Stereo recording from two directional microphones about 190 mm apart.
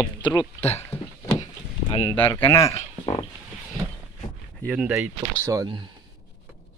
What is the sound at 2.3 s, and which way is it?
Speech, 15° left (ahead or behind).